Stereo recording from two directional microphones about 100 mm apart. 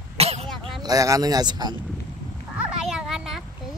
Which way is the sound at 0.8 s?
35° right (ahead or behind).